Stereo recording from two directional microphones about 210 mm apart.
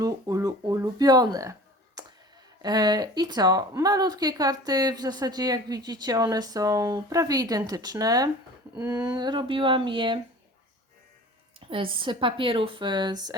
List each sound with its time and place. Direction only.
0.0 s speech: 15° right (ahead or behind)
2.6 s speech: 20° right (ahead or behind)
11.6 s speech: 25° right (ahead or behind)